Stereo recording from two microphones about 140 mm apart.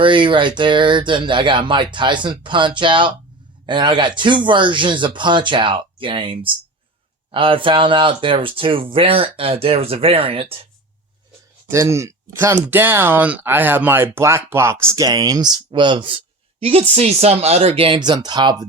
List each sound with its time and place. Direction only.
0.0 s speech: 35° right (ahead or behind)
11.7 s speech: 20° right (ahead or behind)